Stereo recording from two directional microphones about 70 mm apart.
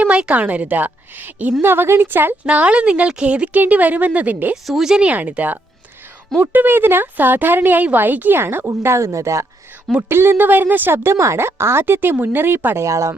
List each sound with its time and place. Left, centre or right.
0.0 s speech: centre
2.5 s speech: centre
4.5 s speech: centre; by 9.5 s right
10.1 s speech: right